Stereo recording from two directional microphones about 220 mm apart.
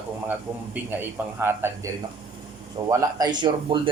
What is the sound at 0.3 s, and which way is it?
A man's voice, 5° right (ahead or behind).